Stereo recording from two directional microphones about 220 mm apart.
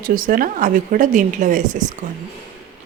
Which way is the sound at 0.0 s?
40° right (ahead or behind).